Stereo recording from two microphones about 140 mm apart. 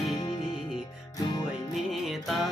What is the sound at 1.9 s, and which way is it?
Music, centre (ahead or behind).